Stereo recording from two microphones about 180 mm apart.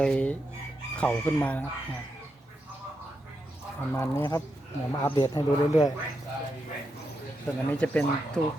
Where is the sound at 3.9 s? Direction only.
15° left (ahead or behind).